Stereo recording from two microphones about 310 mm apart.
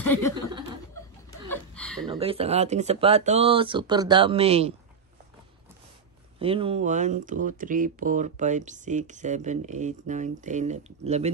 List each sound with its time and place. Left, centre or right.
0.0 s chuckle: centre
1.5 s chuckle: centre
2.0 s speech: centre
6.4 s speech: centre